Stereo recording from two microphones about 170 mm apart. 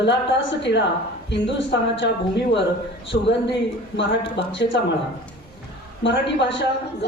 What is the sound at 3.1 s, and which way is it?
Speech, 90° left.